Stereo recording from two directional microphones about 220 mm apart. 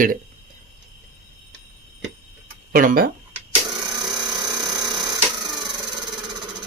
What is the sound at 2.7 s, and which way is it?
Speech, 40° right (ahead or behind).